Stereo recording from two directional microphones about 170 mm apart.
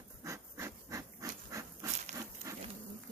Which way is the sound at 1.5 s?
20° right (ahead or behind).